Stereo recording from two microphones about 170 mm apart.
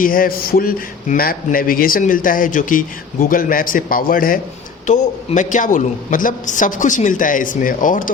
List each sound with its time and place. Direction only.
0.0 s a man's voice: 55° left (ahead or behind)